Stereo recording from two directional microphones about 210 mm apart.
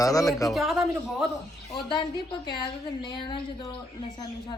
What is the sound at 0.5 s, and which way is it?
Speech, centre (ahead or behind).